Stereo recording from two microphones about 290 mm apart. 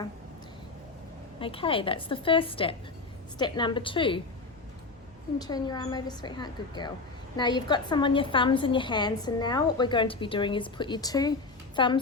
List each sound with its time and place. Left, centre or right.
1.4 s a woman's voice: centre
5.4 s a woman's voice: centre